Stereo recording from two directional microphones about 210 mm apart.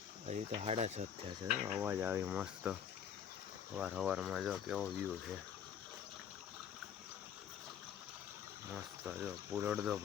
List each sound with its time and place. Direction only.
0.3 s speech: 30° right (ahead or behind)
1.7 s speech: 10° right (ahead or behind)
3.8 s speech: 5° right (ahead or behind)
8.7 s speech: 5° right (ahead or behind)